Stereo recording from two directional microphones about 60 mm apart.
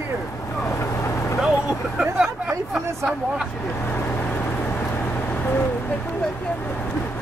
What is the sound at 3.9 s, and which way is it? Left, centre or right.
Vehicle, left.